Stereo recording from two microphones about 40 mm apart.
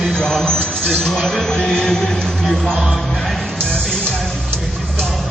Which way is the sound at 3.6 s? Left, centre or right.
Left.